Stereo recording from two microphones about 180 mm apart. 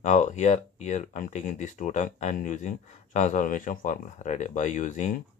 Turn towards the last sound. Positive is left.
turn(degrees=45)  # may be behind; listen again after turning